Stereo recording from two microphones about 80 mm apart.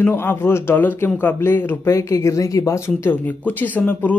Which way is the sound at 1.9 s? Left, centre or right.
Left.